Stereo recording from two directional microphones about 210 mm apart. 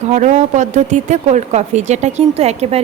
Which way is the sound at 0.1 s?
35° right (ahead or behind).